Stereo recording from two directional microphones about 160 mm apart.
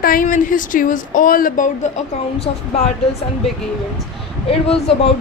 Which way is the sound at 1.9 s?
45° left (ahead or behind).